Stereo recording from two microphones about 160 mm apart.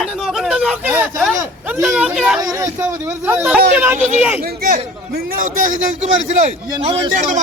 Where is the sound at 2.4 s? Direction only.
20° right (ahead or behind).